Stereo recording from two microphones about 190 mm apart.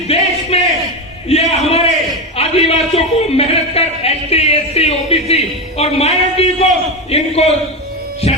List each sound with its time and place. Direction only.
0.1 s speech: 35° left (ahead or behind)
0.5 s a sound: 30° left (ahead or behind)
2.3 s a man's voice: 30° left (ahead or behind)
8.2 s music: 30° left (ahead or behind)